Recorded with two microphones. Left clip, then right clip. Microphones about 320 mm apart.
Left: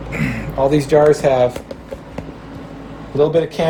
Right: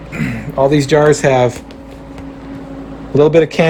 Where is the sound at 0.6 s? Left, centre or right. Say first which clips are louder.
Right 2 dB; right.